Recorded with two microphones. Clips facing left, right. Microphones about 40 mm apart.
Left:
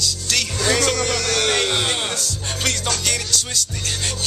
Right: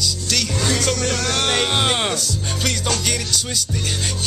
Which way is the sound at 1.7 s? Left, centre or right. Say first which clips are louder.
Right 3 dB; centre.